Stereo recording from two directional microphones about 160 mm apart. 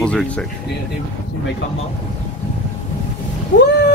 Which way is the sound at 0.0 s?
5° left (ahead or behind).